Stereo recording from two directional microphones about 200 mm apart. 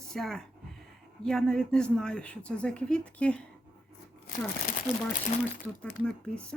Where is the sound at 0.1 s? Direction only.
Centre (ahead or behind).